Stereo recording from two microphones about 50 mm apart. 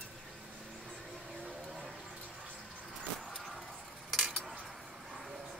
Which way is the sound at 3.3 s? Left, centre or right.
Centre.